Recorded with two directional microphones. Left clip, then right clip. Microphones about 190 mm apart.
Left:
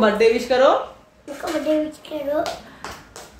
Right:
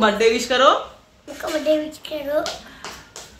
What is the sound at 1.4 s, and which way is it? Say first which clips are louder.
Speech: right 1 dB; 15° left (ahead or behind).